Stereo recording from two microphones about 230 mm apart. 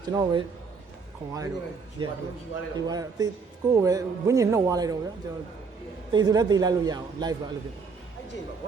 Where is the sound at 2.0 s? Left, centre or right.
Right.